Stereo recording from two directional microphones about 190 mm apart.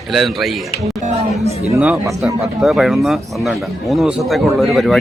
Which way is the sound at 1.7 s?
10° right (ahead or behind).